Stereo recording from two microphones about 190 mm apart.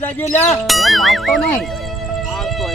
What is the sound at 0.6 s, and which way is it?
Speech, centre (ahead or behind).